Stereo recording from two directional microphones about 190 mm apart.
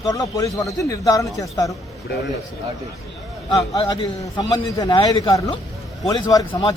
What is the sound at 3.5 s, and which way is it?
A man's voice, 25° left (ahead or behind).